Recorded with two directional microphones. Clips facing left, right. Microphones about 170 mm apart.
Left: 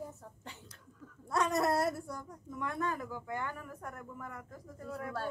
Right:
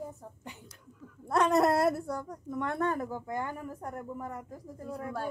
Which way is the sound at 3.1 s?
40° right (ahead or behind).